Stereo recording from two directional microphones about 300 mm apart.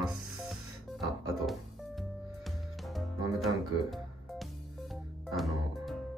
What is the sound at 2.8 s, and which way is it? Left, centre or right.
Music, centre.